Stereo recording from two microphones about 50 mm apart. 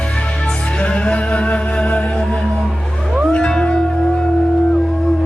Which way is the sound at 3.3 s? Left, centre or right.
Centre.